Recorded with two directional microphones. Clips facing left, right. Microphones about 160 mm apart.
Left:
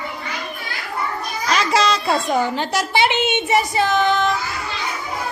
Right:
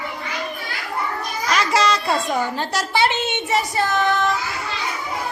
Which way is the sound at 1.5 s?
25° left (ahead or behind).